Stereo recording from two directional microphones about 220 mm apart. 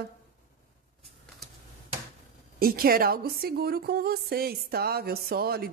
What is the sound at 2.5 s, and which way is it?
Humming, 40° right (ahead or behind).